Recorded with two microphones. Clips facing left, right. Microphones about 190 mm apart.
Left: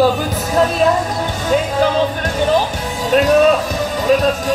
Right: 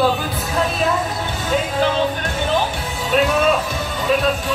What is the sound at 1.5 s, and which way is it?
Music, 40° left (ahead or behind).